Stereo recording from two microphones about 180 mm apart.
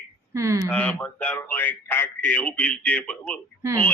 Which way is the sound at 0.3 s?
15° right (ahead or behind).